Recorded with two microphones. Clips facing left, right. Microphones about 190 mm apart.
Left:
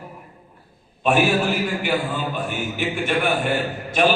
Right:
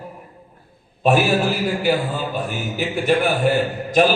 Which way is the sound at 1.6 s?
35° right (ahead or behind).